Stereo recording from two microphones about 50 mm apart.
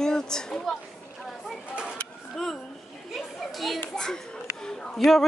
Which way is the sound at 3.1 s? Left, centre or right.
Centre.